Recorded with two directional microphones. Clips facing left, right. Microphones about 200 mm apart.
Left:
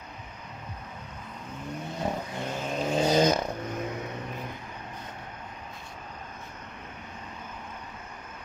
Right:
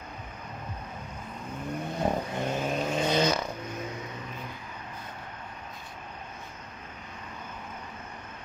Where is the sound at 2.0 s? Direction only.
55° right (ahead or behind).